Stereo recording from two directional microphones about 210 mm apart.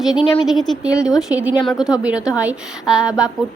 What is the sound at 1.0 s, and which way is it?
A woman's voice, 5° right (ahead or behind).